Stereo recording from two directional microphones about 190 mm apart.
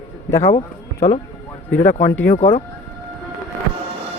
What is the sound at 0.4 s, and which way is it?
Speech, 30° left (ahead or behind).